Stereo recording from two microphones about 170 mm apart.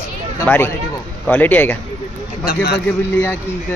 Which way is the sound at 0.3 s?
10° left (ahead or behind).